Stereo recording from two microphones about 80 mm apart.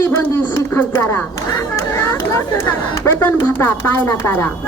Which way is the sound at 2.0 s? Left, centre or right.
Left.